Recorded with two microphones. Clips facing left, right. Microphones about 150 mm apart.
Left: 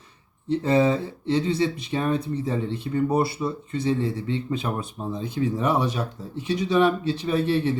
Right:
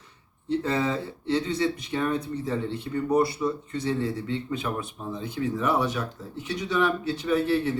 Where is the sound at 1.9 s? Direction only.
25° left (ahead or behind).